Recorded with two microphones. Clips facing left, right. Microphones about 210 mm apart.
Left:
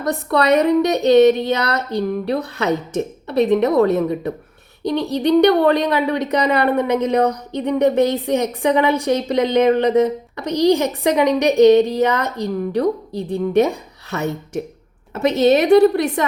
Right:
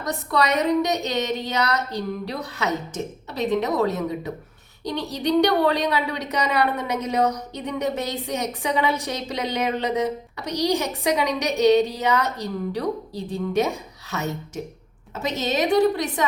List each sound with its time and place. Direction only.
0.0 s speech: 60° left (ahead or behind)